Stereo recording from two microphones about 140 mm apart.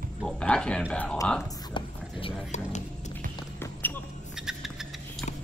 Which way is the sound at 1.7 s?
40° left (ahead or behind).